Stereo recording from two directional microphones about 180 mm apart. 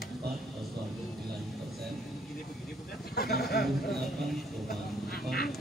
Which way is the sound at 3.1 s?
60° left (ahead or behind).